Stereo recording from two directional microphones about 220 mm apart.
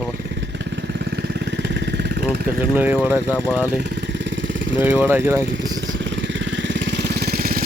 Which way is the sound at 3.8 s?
55° right (ahead or behind).